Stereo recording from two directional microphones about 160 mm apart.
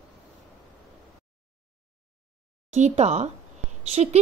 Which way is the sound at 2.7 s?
45° right (ahead or behind).